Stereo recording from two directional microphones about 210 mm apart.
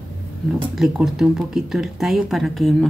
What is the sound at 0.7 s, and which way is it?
Speech, centre (ahead or behind).